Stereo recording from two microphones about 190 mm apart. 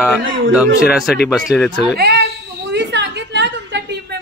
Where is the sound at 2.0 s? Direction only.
55° right (ahead or behind).